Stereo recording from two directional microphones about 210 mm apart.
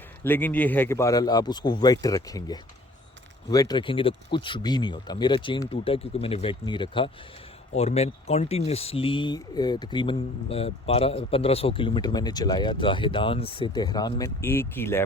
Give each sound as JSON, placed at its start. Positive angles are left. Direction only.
{"t": 0.3, "sound": "speech", "side_deg": 10}